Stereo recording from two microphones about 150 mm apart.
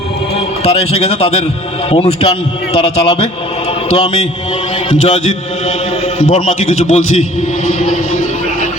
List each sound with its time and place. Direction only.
0.6 s a man's voice: 45° left (ahead or behind)
7.7 s vehicle: 50° left (ahead or behind)